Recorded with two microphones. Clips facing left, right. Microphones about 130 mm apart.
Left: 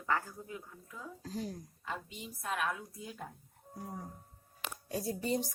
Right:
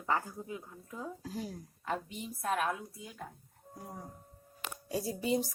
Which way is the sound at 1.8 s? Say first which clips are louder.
Right 6 dB; 50° right (ahead or behind).